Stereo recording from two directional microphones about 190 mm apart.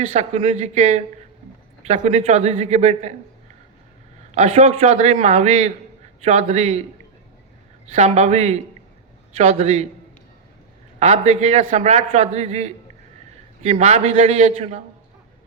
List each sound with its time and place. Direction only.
0.1 s a man's voice: 35° right (ahead or behind)
4.3 s a man's voice: 35° right (ahead or behind)
7.9 s a man's voice: 35° right (ahead or behind)
11.0 s a man's voice: 35° right (ahead or behind)